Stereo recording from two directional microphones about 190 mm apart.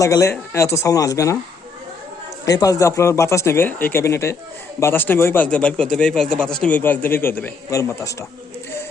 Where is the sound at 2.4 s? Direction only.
20° left (ahead or behind).